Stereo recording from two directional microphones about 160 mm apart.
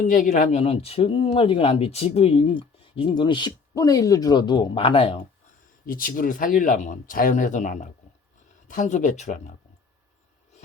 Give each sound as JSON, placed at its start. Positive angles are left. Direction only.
{"t": 0.0, "sound": "speech", "side_deg": 60}
{"t": 0.6, "sound": "speech", "side_deg": 40}
{"t": 5.8, "sound": "speech", "side_deg": 65}